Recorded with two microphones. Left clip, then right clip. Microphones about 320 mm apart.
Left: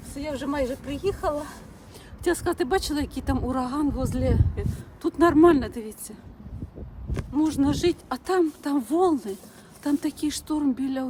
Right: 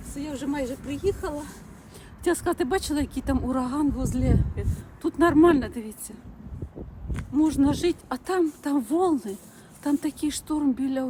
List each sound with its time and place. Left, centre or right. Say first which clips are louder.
0.1 s speech: left 2 dB; centre
2.2 s speech: even; centre